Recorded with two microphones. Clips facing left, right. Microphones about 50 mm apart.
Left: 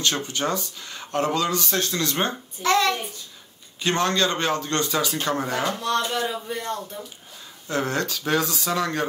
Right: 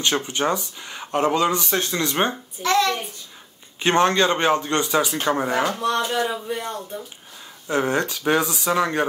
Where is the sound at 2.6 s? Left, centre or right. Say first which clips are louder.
Right 1 dB; centre.